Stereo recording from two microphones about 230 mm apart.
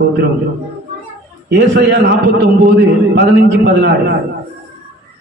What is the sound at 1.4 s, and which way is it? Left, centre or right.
Speech, right.